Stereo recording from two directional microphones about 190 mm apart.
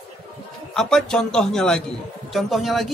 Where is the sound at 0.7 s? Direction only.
Centre (ahead or behind).